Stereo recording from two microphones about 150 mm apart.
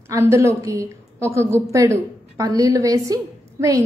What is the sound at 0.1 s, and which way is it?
A woman's voice, 20° right (ahead or behind).